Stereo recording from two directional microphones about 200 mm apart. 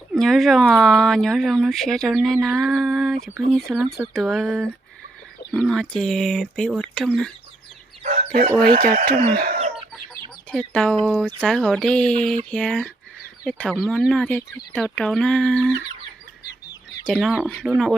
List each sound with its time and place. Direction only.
0.1 s speech: centre (ahead or behind)
8.0 s speech: 35° right (ahead or behind)
8.6 s speech: 45° right (ahead or behind)
10.5 s speech: 5° left (ahead or behind)
17.1 s speech: 5° right (ahead or behind)